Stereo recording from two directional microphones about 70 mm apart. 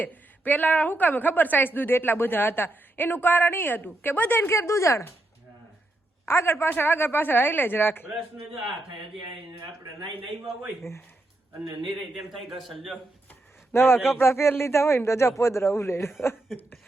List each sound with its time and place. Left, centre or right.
0.0 s a woman's voice: left
6.2 s a man's voice: left
12.3 s a man's voice: centre
13.7 s a man's voice: left